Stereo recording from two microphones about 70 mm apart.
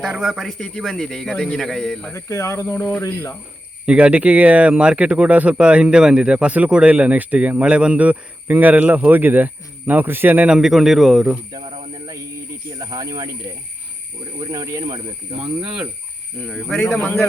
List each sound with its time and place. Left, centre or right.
0.0 s speech: centre
0.6 s a man's voice: centre
2.1 s speech: left
3.8 s speech: centre
10.5 s speech: centre
12.8 s speech: right
15.6 s speech: centre
16.5 s speech: centre